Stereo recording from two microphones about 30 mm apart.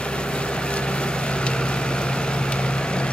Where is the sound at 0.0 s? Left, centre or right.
Left.